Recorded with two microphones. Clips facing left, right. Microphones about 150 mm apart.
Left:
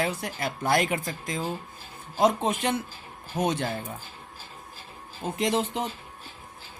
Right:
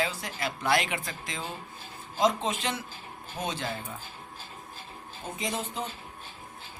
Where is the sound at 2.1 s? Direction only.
55° left (ahead or behind).